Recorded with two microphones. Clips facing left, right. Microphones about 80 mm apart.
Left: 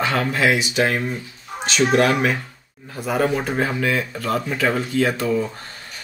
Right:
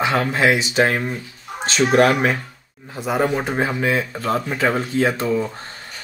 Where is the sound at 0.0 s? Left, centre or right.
Centre.